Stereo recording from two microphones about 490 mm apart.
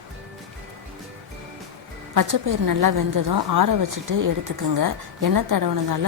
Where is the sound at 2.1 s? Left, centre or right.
Right.